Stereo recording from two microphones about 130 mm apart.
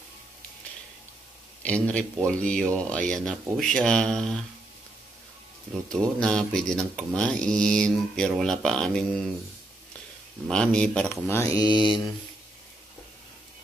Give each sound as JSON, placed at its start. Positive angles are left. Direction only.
{"t": 1.6, "sound": "speech", "side_deg": 10}
{"t": 2.2, "sound": "mantra", "side_deg": 5}
{"t": 5.9, "sound": "mantra", "side_deg": 5}
{"t": 10.5, "sound": "mantra", "side_deg": 5}
{"t": 11.2, "sound": "mantra", "side_deg": 25}